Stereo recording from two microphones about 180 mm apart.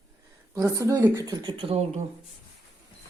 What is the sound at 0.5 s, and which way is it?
Speech, 15° right (ahead or behind).